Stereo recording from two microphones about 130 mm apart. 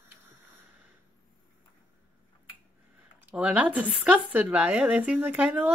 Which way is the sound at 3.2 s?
10° right (ahead or behind).